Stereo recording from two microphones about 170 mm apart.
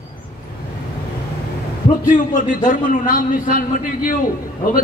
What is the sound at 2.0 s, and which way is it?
A man's voice, 50° left (ahead or behind).